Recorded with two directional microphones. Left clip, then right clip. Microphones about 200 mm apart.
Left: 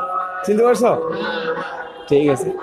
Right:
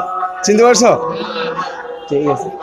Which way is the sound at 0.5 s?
25° right (ahead or behind).